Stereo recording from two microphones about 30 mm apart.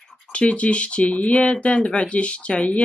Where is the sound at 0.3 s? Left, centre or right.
Left.